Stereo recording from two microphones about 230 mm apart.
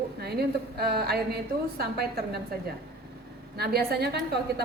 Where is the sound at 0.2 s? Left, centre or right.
Right.